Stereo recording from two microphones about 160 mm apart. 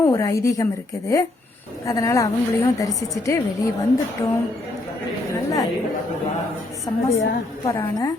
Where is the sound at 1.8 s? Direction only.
20° left (ahead or behind).